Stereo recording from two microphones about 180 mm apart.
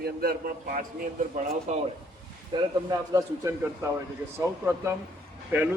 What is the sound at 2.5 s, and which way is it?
Speech, 25° right (ahead or behind).